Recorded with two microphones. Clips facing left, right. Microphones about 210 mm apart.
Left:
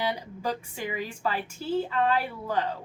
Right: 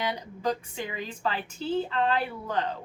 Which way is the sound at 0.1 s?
10° left (ahead or behind).